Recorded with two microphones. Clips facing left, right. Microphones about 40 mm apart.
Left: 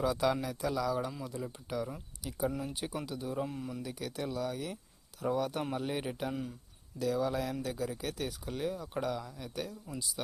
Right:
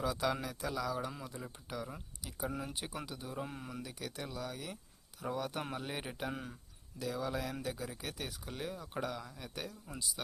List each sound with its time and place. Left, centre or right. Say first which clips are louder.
0.0 s speech: left 5 dB; centre
3.5 s speech: left 5 dB; right
3.8 s speech: left 6 dB; centre
6.3 s speech: left 5 dB; right
7.0 s speech: left 6 dB; centre